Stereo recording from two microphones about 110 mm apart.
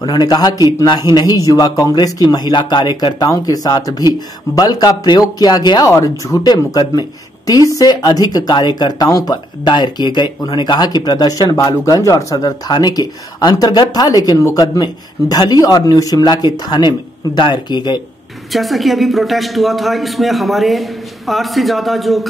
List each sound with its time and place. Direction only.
0.0 s speech: 40° left (ahead or behind)
5.9 s a woman's voice: 25° left (ahead or behind); by 18.0 s 45° left (ahead or behind)
18.5 s a man's voice: centre (ahead or behind)